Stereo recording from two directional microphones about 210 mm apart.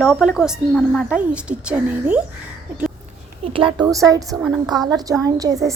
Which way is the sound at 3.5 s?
20° right (ahead or behind).